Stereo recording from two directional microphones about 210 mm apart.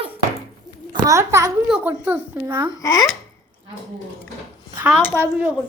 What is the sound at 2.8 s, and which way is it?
Speech, 15° left (ahead or behind).